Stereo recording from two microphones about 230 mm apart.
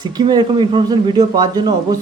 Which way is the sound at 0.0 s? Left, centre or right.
Centre.